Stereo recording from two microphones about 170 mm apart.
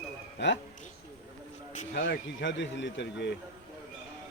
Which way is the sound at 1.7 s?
50° left (ahead or behind).